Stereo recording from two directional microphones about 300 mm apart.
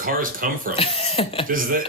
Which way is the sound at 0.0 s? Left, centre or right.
Right.